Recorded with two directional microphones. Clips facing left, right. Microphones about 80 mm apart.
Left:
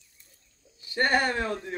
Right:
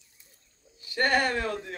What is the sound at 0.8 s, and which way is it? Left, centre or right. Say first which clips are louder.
Speech: even; left.